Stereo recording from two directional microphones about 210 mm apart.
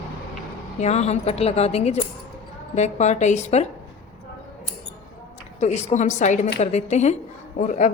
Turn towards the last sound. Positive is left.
turn(degrees=35)  # may be behind; listen again after turning